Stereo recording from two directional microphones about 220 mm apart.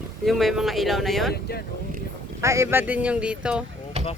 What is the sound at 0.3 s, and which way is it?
Speech, centre (ahead or behind).